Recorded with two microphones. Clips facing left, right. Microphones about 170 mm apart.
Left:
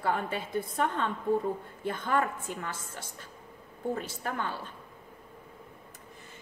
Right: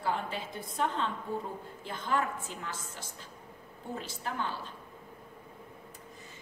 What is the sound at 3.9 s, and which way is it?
Speech, 55° left (ahead or behind).